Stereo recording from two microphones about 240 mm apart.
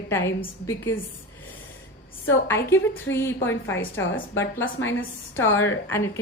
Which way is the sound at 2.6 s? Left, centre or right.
Centre.